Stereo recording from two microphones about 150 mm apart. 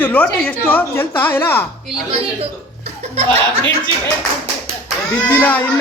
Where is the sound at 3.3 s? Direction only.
10° left (ahead or behind).